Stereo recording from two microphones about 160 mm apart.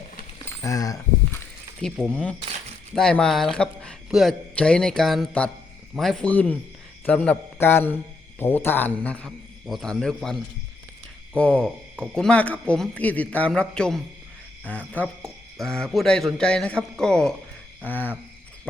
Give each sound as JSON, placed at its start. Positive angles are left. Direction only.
{"t": 0.6, "sound": "a sound", "side_deg": 20}
{"t": 1.8, "sound": "a man's voice", "side_deg": 5}
{"t": 11.3, "sound": "a man's voice", "side_deg": 5}